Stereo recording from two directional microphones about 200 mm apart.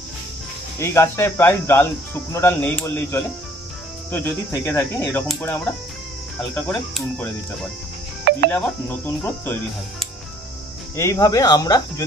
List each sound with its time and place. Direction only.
0.7 s speech: 15° left (ahead or behind)
6.5 s speech: 5° left (ahead or behind)
8.2 s music: 50° right (ahead or behind)
8.5 s speech: 10° left (ahead or behind)